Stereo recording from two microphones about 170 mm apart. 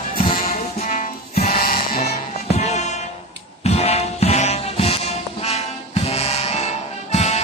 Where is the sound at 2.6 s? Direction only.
40° left (ahead or behind).